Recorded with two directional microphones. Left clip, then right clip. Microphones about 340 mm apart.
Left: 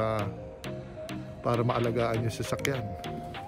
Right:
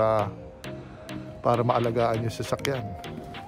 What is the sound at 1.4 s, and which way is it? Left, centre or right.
Speech, centre.